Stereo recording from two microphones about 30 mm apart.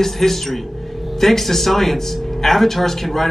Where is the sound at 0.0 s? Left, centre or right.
Centre.